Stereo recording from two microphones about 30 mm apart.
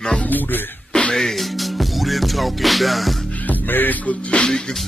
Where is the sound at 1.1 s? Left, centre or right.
Centre.